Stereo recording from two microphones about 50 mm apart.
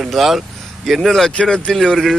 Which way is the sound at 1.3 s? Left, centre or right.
Centre.